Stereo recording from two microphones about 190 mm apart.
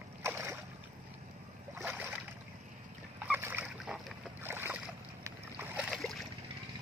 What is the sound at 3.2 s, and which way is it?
Boat, 10° right (ahead or behind).